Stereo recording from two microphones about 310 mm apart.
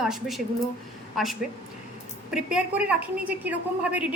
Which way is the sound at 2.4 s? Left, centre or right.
Centre.